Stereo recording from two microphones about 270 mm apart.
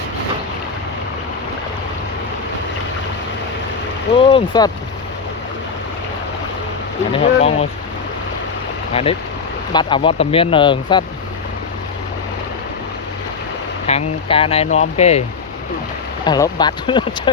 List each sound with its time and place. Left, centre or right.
4.2 s speech: centre
7.1 s speech: left
8.9 s speech: left
13.8 s speech: left
16.2 s speech: centre